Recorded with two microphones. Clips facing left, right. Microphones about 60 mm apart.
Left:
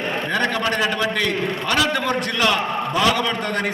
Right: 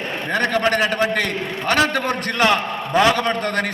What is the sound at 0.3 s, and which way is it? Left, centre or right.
A man's voice, right.